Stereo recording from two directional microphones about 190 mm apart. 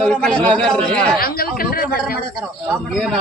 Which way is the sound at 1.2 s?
50° left (ahead or behind).